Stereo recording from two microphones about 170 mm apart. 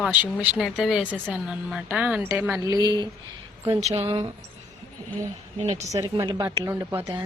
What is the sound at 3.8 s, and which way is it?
Speech, 40° right (ahead or behind).